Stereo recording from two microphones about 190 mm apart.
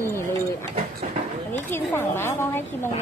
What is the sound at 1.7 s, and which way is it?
Speech, 10° left (ahead or behind).